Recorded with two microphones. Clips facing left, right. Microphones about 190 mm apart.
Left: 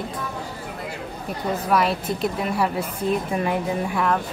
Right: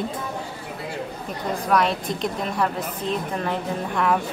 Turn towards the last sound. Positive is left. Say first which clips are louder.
# left 2 dB
turn(degrees=10)  # may be behind; listen again after turning